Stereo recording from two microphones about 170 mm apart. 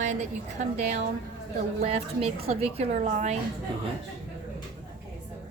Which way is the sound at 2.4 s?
35° right (ahead or behind).